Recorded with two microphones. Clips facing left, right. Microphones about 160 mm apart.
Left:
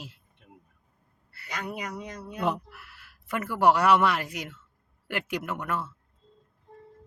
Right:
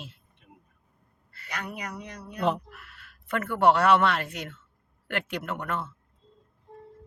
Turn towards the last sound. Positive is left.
turn(degrees=5)  # may be behind; listen again after turning